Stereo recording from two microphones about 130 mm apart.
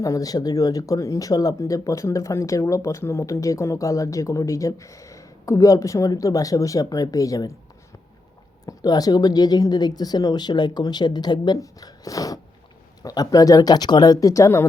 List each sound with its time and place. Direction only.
0.0 s speech: 25° left (ahead or behind)
8.6 s speech: 30° left (ahead or behind)